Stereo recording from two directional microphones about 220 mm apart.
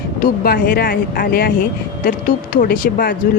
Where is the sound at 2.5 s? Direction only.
40° left (ahead or behind).